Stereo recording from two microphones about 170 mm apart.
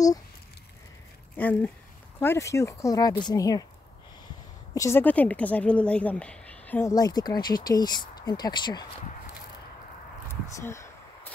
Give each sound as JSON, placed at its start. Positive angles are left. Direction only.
{"t": 1.3, "sound": "a woman's voice", "side_deg": 10}
{"t": 4.7, "sound": "a woman's voice", "side_deg": 15}
{"t": 10.2, "sound": "a sound", "side_deg": 15}